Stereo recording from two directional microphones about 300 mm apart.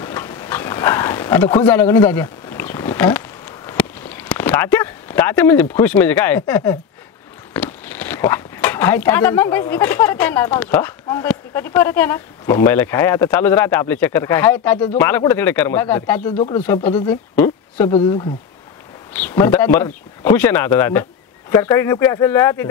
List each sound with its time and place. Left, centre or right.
0.0 s a sound: centre
7.5 s speech: centre
16.3 s speech: left
16.6 s speech: centre